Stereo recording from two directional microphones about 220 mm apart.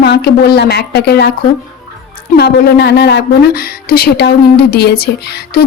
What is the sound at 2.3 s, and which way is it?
Speech, 50° left (ahead or behind).